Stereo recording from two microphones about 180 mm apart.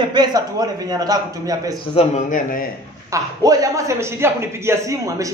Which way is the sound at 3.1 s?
20° right (ahead or behind).